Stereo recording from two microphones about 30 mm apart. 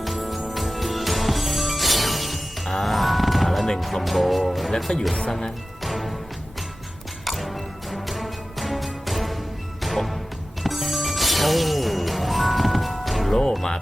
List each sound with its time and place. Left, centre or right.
0.0 s music: centre
4.9 s speech: left
5.8 s music: centre
7.3 s music: centre
13.3 s music: centre